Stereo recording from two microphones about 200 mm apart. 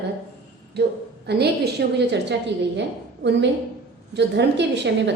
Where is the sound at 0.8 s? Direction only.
55° right (ahead or behind).